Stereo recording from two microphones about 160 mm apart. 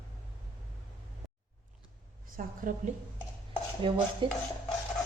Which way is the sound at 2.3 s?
60° right (ahead or behind).